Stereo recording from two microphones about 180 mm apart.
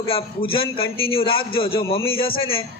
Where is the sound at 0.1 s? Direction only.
30° left (ahead or behind).